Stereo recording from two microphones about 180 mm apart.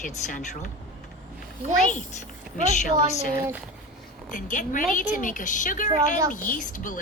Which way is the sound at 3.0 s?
50° left (ahead or behind).